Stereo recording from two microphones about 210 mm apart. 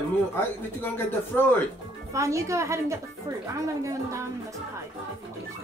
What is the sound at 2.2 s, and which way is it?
Speech, 15° right (ahead or behind).